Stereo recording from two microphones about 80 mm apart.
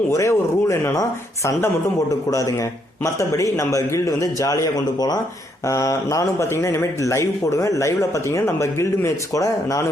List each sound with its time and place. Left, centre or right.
0.1 s speech: left
2.3 s a man's voice: left
5.6 s a man's voice: left